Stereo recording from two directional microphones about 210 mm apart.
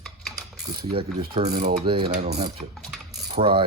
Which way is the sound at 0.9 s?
25° right (ahead or behind).